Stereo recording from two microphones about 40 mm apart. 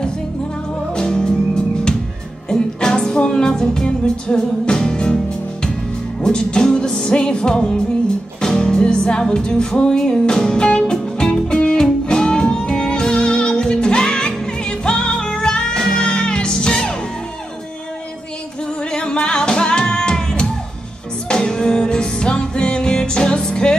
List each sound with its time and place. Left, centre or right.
0.9 s music: centre
18.8 s music: left